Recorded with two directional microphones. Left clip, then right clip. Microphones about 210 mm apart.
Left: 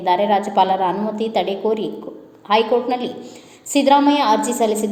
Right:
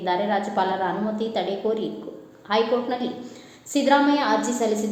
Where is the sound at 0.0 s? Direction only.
30° left (ahead or behind).